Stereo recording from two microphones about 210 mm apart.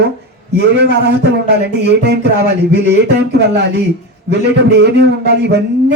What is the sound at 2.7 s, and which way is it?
Speech, 55° right (ahead or behind).